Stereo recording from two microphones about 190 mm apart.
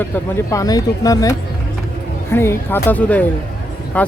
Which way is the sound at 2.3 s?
10° left (ahead or behind).